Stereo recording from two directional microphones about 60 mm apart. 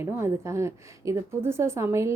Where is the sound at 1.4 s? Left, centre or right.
Right.